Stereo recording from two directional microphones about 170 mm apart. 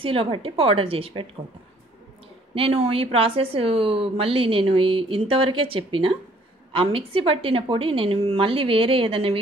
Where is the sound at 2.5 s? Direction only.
35° right (ahead or behind).